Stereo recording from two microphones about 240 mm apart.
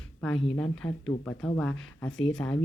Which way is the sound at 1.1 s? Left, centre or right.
Left.